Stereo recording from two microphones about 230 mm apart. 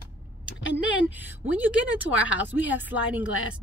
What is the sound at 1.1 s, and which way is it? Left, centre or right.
Speech, centre.